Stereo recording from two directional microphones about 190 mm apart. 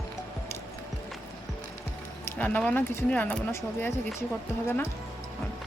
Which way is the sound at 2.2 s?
10° left (ahead or behind).